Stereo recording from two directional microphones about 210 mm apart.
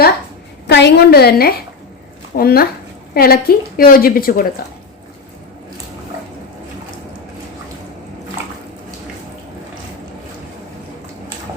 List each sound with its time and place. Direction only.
0.7 s a woman's voice: 50° left (ahead or behind)
8.4 s bathtub: 10° right (ahead or behind)